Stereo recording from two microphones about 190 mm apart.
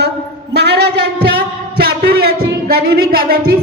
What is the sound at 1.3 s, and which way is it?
Music, 55° right (ahead or behind).